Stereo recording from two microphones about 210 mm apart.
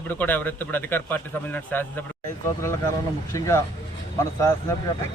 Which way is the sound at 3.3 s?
15° left (ahead or behind).